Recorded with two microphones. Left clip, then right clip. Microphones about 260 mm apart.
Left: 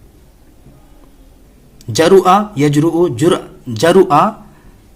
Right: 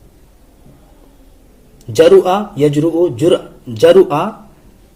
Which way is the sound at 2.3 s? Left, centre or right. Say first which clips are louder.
Left 2 dB; left.